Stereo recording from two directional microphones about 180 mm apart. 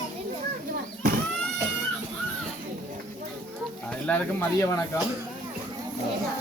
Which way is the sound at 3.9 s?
5° left (ahead or behind).